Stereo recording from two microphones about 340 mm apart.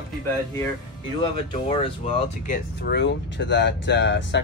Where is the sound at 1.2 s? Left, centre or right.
Centre.